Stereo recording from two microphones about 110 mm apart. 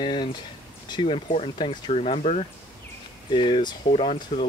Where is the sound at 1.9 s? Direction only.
70° left (ahead or behind).